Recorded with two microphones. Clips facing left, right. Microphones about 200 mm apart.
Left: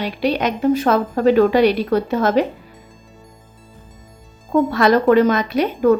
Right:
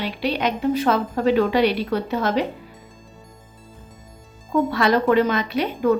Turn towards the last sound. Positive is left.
turn(degrees=45)  # may be behind; listen again after turning